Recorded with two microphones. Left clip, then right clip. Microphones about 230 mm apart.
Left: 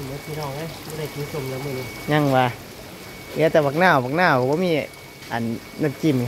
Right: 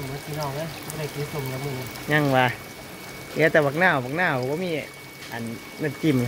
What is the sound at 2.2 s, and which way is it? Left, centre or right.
Speech, centre.